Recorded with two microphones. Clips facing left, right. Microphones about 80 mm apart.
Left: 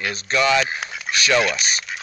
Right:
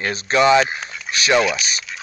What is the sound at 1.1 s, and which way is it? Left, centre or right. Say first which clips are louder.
Mechanisms: left 1 dB; centre.